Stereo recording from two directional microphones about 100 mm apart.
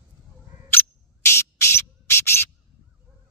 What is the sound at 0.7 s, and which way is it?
Cricket, 25° left (ahead or behind).